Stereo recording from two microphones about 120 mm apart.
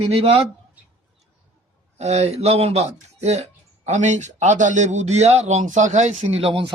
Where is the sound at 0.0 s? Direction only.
55° right (ahead or behind).